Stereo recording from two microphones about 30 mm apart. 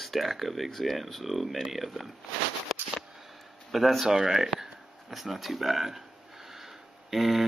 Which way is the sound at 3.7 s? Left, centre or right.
Centre.